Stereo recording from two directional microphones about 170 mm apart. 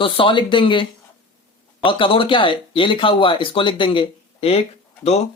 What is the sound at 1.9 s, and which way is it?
Speech, 30° left (ahead or behind).